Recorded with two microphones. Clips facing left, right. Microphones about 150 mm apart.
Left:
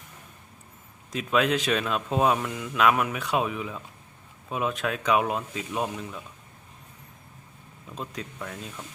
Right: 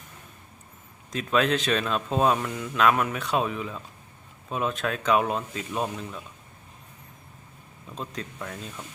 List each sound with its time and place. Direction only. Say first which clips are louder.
1.1 s speech: even; 10° left (ahead or behind)
7.9 s speech: right 1 dB; 10° left (ahead or behind)